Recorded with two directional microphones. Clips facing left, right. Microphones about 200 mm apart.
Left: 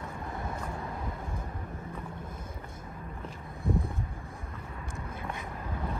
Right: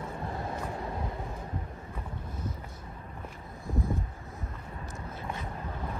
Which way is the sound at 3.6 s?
60° left (ahead or behind).